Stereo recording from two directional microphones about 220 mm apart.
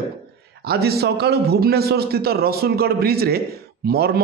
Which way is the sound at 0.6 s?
45° right (ahead or behind).